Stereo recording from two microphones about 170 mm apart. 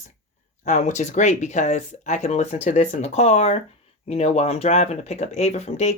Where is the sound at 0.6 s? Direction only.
45° left (ahead or behind).